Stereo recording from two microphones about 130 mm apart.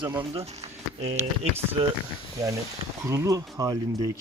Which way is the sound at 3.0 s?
25° right (ahead or behind).